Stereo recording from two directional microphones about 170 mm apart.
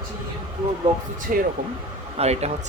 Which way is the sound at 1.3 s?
55° right (ahead or behind).